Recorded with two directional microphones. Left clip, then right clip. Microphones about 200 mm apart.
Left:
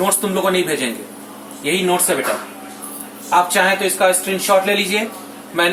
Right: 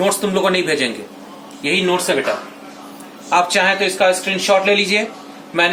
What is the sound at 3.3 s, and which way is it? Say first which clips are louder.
Speech: even; 35° right (ahead or behind).